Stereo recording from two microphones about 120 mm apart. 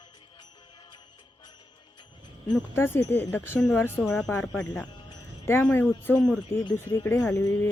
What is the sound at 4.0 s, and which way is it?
Speech, centre (ahead or behind).